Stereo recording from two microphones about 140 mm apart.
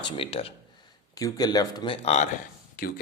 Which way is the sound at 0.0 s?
40° left (ahead or behind).